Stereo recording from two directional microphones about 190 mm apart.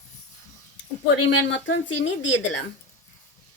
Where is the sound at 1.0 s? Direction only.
75° left (ahead or behind).